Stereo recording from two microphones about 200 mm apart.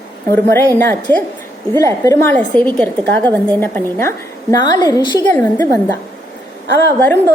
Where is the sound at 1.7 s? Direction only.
15° left (ahead or behind).